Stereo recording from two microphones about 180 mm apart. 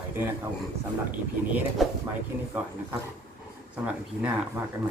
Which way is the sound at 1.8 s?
Centre (ahead or behind).